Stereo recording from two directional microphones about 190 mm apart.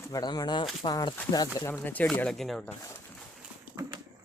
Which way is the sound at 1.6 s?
10° left (ahead or behind).